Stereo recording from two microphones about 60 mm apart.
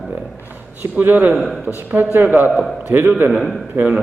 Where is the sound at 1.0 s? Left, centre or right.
Right.